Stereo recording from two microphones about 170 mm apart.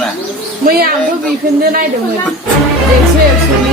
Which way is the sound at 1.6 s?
55° right (ahead or behind).